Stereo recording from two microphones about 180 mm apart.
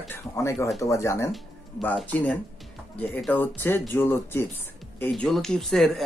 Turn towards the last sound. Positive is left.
turn(degrees=0)  # may be behind; listen again after turning